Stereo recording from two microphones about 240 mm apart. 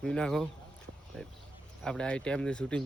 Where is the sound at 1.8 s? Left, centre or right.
Centre.